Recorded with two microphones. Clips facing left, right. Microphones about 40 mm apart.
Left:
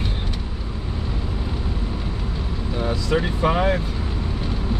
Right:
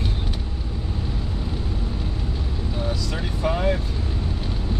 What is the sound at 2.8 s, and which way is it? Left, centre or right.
Vehicle, left.